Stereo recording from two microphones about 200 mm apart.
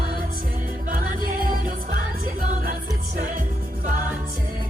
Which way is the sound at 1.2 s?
45° right (ahead or behind).